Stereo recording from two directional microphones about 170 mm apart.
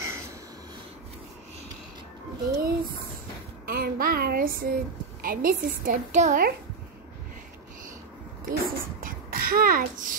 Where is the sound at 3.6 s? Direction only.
60° right (ahead or behind).